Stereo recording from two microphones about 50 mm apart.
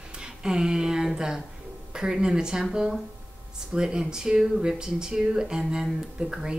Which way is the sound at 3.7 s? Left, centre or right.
Centre.